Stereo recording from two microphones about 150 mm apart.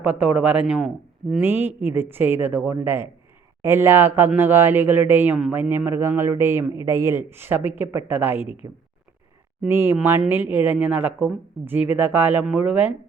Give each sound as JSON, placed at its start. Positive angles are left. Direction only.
{"t": 0.0, "sound": "speech", "side_deg": -10}
{"t": 1.4, "sound": "speech", "side_deg": -15}